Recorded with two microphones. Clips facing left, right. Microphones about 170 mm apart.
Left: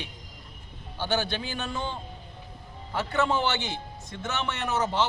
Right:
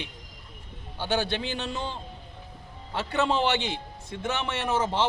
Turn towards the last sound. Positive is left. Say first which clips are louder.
# right 1 dB
turn(degrees=-30)  # may be behind; listen again after turning